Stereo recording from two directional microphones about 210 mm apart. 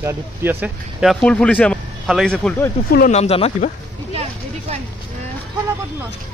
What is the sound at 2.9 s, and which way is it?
Speech, 45° left (ahead or behind).